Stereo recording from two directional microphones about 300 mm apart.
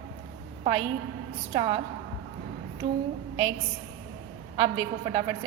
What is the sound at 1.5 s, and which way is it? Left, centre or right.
Speech, centre.